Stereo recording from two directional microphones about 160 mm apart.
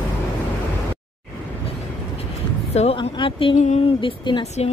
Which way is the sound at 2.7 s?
35° left (ahead or behind).